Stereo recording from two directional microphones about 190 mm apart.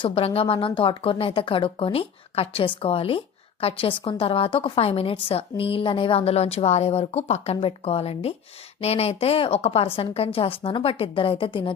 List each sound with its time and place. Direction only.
0.0 s speech: 30° left (ahead or behind)